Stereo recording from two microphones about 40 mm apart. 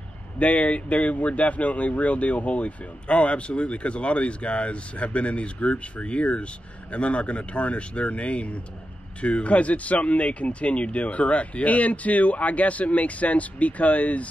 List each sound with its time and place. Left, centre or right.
0.4 s speech: left